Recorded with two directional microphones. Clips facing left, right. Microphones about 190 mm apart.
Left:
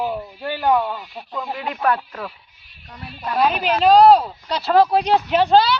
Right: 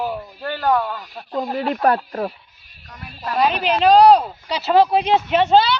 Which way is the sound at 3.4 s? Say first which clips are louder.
Even; 5° left (ahead or behind).